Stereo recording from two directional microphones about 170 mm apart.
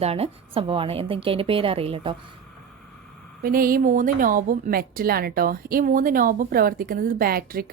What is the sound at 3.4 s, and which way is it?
A woman's voice, 60° right (ahead or behind).